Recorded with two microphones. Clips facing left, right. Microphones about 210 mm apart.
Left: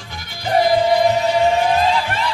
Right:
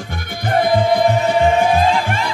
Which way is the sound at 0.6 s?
55° right (ahead or behind).